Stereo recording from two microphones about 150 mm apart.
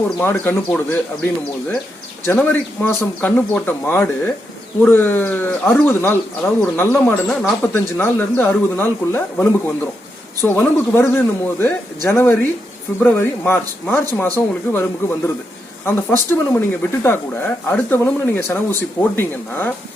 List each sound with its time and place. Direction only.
0.2 s speech: 15° left (ahead or behind)